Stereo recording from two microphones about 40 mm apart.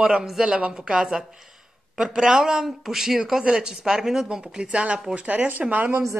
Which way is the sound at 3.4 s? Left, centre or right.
Right.